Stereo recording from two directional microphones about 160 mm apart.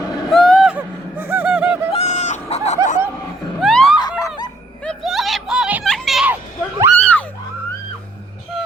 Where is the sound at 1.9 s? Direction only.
45° left (ahead or behind).